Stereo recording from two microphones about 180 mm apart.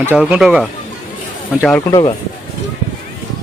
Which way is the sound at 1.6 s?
10° left (ahead or behind).